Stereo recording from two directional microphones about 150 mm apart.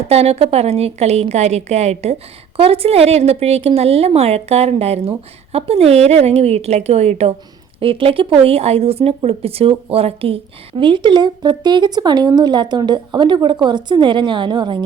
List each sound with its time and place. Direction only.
0.1 s a woman's voice: 45° right (ahead or behind)